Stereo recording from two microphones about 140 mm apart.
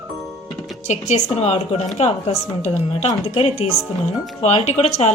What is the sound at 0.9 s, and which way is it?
Speech, 55° left (ahead or behind).